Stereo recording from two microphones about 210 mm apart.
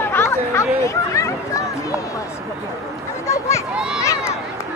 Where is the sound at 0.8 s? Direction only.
15° left (ahead or behind).